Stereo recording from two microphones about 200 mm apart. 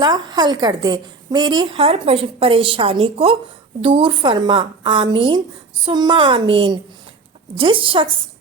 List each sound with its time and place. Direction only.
0.0 s a woman's voice: 20° right (ahead or behind)